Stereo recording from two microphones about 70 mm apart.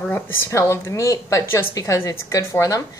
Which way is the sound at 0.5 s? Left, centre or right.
Left.